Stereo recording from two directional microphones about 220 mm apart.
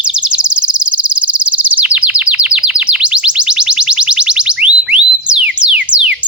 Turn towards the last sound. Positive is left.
turn(degrees=-5)  # may be behind; listen again after turning